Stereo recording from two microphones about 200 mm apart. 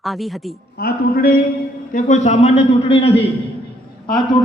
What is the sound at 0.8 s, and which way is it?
Speech, 50° left (ahead or behind).